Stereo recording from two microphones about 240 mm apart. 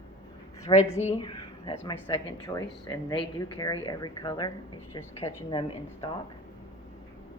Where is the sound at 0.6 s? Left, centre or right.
Centre.